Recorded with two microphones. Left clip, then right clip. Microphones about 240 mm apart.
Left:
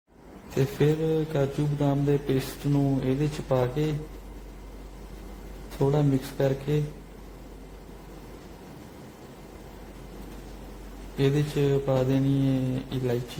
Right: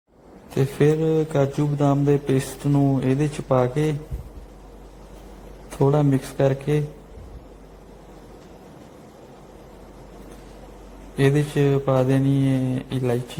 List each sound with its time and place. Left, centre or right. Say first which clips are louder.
0.5 s a man's voice: right 5 dB; right
5.8 s a man's voice: right 5 dB; right
11.2 s a man's voice: right 5 dB; right